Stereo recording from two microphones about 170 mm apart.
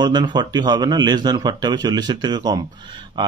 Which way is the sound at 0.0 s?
25° right (ahead or behind).